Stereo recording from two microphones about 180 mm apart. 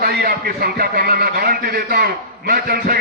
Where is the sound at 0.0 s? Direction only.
60° right (ahead or behind).